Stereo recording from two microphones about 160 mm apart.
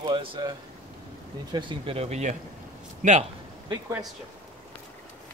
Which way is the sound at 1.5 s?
30° right (ahead or behind).